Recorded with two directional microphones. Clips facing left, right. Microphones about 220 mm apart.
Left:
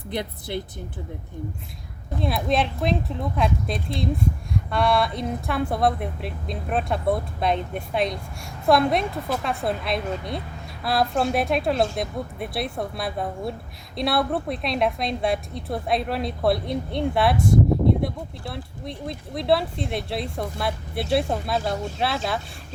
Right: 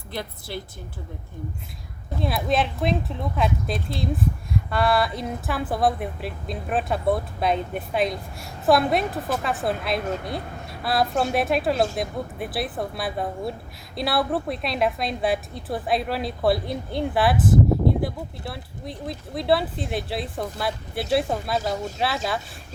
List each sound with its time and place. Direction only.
0.1 s speech: 20° left (ahead or behind)
2.2 s a woman's voice: centre (ahead or behind)